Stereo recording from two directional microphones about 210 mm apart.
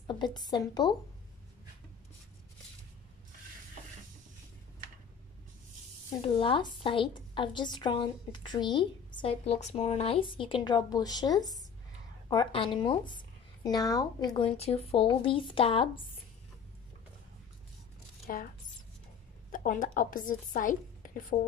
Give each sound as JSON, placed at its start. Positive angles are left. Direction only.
{"t": 0.0, "sound": "a woman's voice", "side_deg": 20}
{"t": 6.2, "sound": "a woman's voice", "side_deg": 25}
{"t": 18.2, "sound": "speech", "side_deg": 45}
{"t": 19.5, "sound": "a woman's voice", "side_deg": 40}